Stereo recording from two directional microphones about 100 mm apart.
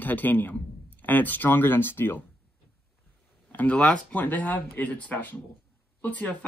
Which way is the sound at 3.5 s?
15° left (ahead or behind).